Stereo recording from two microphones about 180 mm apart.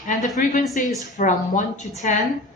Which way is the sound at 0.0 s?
45° left (ahead or behind).